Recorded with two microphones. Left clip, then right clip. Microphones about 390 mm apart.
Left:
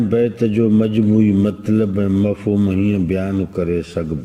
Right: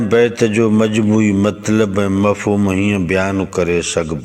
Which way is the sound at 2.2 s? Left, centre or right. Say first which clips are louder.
Right 5 dB; right.